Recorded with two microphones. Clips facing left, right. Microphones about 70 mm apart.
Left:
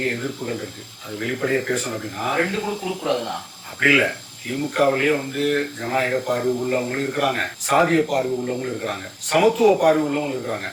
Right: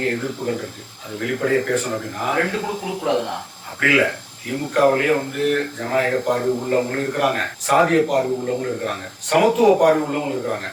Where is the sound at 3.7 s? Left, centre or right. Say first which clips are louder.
Right 1 dB; centre.